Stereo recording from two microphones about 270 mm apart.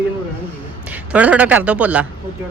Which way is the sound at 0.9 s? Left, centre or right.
Centre.